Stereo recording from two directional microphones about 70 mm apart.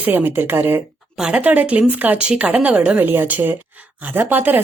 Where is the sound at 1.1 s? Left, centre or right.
Centre.